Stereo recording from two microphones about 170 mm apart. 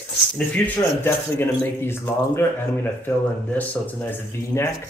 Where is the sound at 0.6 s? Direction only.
10° left (ahead or behind).